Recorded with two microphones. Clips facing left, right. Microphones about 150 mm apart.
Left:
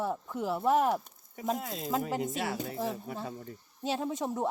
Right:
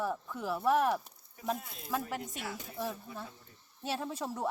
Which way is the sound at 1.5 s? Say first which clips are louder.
Left 5 dB; 90° left.